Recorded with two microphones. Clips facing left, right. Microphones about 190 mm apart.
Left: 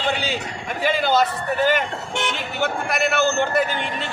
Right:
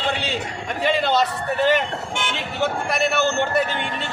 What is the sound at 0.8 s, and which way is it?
Speech, centre (ahead or behind).